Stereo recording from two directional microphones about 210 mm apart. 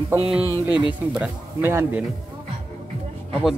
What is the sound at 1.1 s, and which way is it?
Speech, 10° right (ahead or behind).